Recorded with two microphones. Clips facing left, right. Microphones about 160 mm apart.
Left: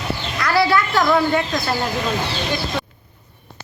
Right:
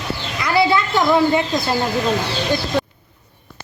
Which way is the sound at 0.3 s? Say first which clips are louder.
Right 1 dB; 20° right (ahead or behind).